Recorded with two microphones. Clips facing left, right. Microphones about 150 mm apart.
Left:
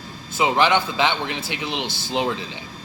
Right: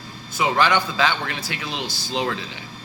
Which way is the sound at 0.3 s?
20° left (ahead or behind).